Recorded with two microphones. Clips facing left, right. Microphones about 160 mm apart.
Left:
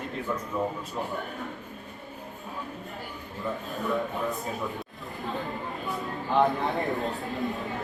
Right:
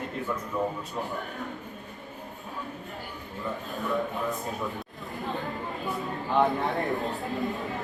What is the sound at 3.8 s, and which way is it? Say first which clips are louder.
Speech: even; centre (ahead or behind).